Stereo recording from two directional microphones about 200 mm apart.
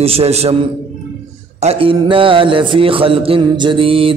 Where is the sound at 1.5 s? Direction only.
30° right (ahead or behind).